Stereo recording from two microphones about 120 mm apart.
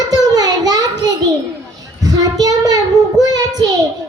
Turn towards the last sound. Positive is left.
turn(degrees=-35)  # may be behind; listen again after turning